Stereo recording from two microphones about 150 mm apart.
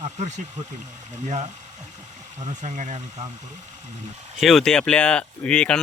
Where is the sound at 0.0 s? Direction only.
50° right (ahead or behind).